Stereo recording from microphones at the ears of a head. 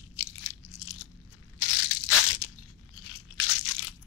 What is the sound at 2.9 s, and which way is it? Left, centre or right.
Crunch, left.